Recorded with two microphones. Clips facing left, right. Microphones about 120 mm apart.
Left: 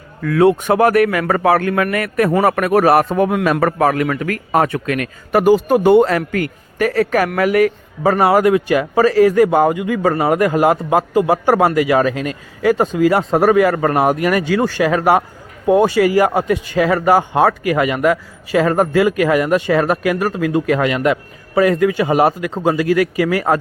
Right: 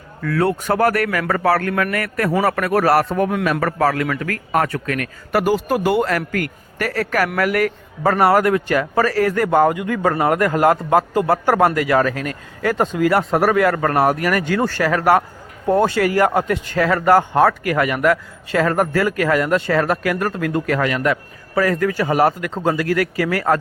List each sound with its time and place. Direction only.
0.3 s a man's voice: 15° left (ahead or behind)